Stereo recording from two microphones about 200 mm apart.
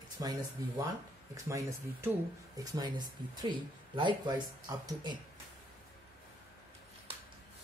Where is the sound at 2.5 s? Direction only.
20° right (ahead or behind).